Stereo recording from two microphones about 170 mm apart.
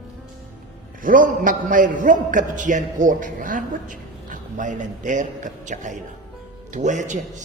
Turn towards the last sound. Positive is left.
turn(degrees=-45)  # may be behind; listen again after turning